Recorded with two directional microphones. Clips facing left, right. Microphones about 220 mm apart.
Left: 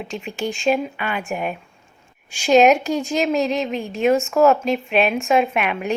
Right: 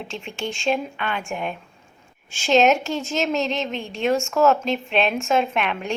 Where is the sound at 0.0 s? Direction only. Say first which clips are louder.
Left 4 dB; 5° left (ahead or behind).